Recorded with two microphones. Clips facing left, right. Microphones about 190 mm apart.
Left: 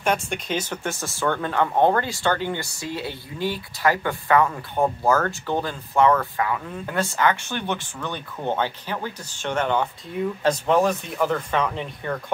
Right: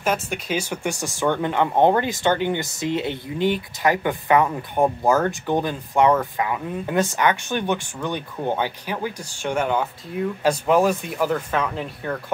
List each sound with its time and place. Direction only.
0.0 s speech: 5° right (ahead or behind)